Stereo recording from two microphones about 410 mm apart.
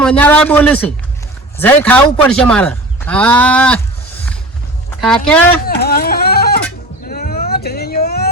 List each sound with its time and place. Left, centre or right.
0.0 s speech: centre
5.0 s speech: centre
5.6 s music: left
7.1 s vehicle: left